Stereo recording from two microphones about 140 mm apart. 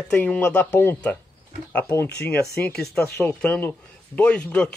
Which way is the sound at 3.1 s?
10° left (ahead or behind).